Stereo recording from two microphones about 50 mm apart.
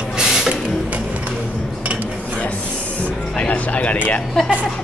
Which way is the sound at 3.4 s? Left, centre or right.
Left.